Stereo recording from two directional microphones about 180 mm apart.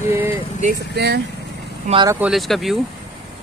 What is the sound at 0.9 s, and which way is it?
Speech, 65° right (ahead or behind).